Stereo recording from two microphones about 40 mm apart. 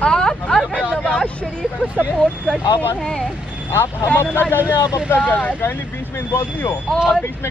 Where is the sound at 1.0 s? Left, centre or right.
Left.